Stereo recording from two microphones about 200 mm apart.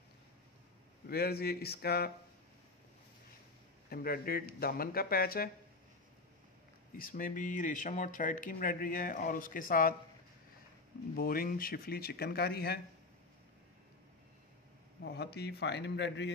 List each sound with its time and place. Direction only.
1.0 s speech: 50° left (ahead or behind)
3.9 s speech: 50° left (ahead or behind)
7.0 s speech: 45° left (ahead or behind)
11.1 s speech: 45° left (ahead or behind)
15.0 s a man's voice: 55° left (ahead or behind)